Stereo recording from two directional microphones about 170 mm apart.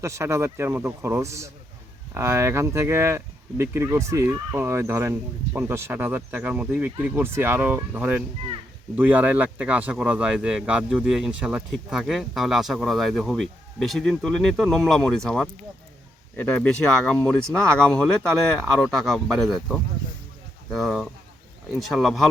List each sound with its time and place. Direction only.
0.0 s speech: 15° right (ahead or behind); by 22.3 s centre (ahead or behind)